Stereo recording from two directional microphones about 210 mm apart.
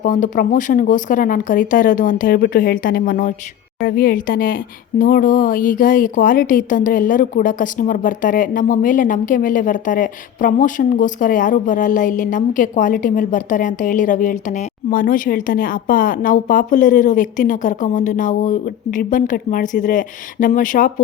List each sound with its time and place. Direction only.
0.0 s speech: 40° left (ahead or behind)